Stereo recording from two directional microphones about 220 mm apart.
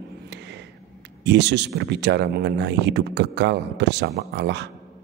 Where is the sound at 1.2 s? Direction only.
50° right (ahead or behind).